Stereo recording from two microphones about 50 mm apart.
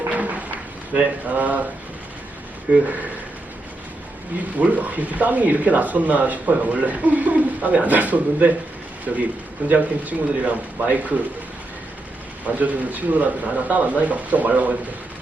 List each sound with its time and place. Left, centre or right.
0.1 s a sound: right
0.9 s speech: right
2.7 s speech: right
4.5 s speech: right
12.5 s speech: right